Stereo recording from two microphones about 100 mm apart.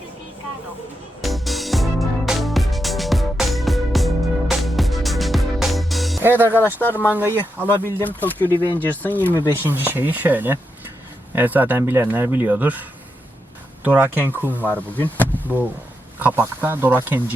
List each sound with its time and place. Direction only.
1.2 s music: centre (ahead or behind)
6.2 s speech: 20° right (ahead or behind)
6.7 s speech: 20° left (ahead or behind)
7.1 s speech: 20° right (ahead or behind)
7.7 s speech: 25° left (ahead or behind)
9.5 s speech: 20° right (ahead or behind)
13.8 s speech: 15° right (ahead or behind)
14.6 s speech: 15° left (ahead or behind)
16.1 s speech: 20° right (ahead or behind)